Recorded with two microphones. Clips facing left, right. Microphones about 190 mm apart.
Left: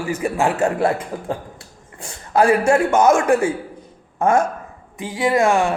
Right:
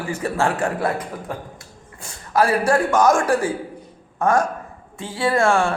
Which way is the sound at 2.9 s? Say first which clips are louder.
Left 2 dB; 25° left (ahead or behind).